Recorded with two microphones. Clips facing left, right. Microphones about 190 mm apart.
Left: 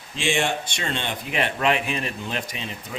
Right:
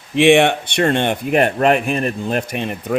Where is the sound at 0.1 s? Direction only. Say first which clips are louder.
Right 13 dB; 65° right (ahead or behind).